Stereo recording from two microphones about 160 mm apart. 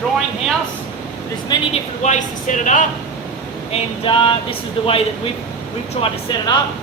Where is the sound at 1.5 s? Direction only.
30° left (ahead or behind).